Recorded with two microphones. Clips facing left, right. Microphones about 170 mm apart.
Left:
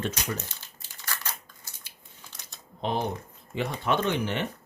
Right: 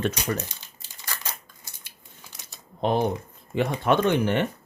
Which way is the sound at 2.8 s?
50° right (ahead or behind).